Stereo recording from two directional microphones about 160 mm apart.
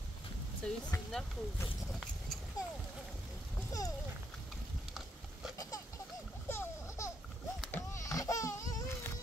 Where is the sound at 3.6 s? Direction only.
20° left (ahead or behind).